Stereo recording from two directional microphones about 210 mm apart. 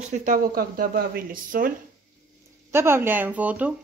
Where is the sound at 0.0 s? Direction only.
35° right (ahead or behind).